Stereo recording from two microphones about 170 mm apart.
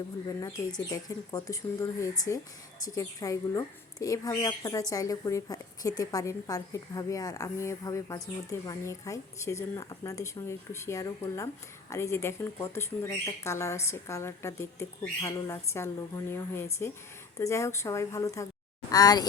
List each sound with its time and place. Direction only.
0.3 s a woman's voice: 20° left (ahead or behind)